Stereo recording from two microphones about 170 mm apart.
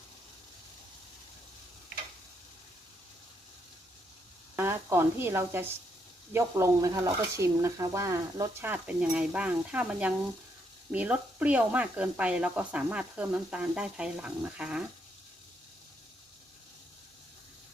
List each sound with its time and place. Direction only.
4.5 s speech: 15° right (ahead or behind)